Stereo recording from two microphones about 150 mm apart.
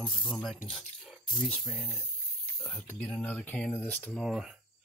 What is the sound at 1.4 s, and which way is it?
Speech, 10° left (ahead or behind).